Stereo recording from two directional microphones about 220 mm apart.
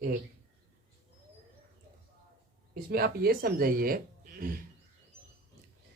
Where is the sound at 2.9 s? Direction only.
45° right (ahead or behind).